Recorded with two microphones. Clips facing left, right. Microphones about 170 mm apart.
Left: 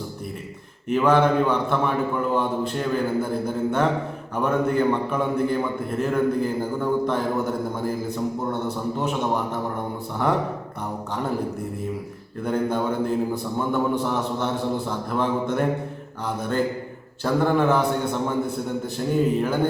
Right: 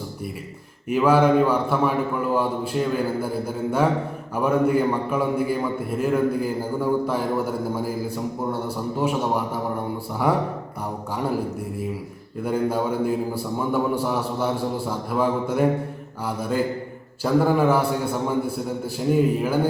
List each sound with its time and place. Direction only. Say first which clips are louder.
0.9 s a man's voice: right 1 dB; 5° right (ahead or behind)
12.5 s a man's voice: right 1 dB; 5° right (ahead or behind)